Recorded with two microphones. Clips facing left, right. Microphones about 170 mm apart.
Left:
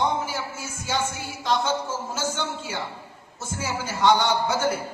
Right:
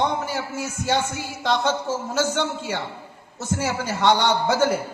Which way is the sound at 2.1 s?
65° right (ahead or behind).